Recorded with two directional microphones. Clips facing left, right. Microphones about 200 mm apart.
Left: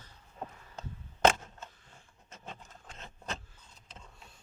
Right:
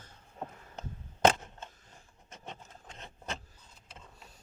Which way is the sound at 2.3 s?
20° right (ahead or behind).